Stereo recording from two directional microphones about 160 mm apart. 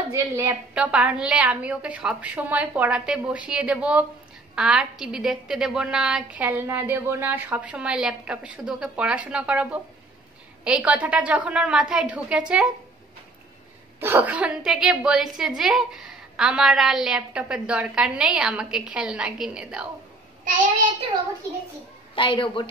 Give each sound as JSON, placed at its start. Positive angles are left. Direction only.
{"t": 0.1, "sound": "a woman's voice", "side_deg": -15}
{"t": 13.9, "sound": "a woman's voice", "side_deg": -15}
{"t": 22.1, "sound": "a woman's voice", "side_deg": 30}